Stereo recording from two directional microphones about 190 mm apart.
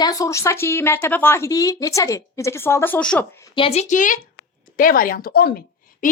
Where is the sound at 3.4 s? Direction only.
30° left (ahead or behind).